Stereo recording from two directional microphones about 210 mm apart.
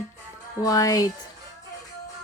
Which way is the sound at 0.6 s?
15° left (ahead or behind).